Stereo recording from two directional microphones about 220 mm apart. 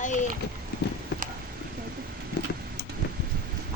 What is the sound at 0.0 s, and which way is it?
Speech, 35° left (ahead or behind).